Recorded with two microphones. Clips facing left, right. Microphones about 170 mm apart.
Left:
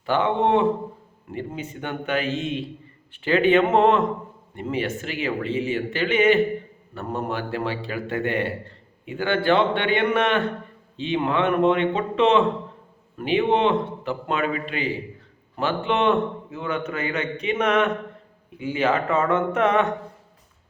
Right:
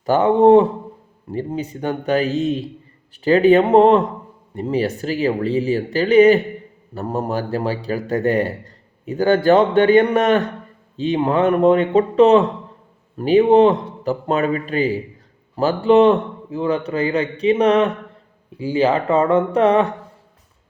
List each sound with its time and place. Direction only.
0.0 s a man's voice: 40° right (ahead or behind)